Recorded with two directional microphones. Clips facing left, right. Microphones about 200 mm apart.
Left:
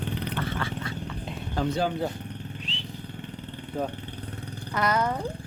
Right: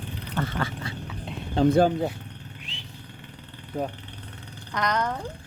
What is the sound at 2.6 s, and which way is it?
Motorcycle, 10° right (ahead or behind).